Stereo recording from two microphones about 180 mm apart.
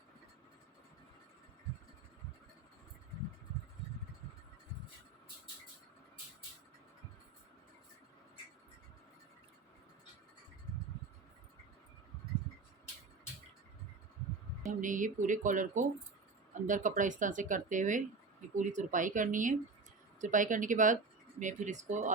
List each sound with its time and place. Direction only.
14.7 s speech: 45° right (ahead or behind)